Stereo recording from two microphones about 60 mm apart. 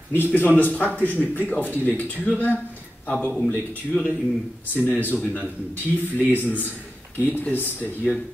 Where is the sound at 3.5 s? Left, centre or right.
Left.